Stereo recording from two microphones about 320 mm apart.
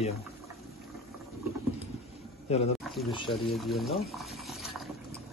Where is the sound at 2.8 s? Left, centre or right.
Centre.